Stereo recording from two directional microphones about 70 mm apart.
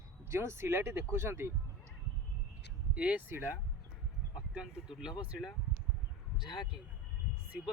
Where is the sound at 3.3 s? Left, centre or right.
Right.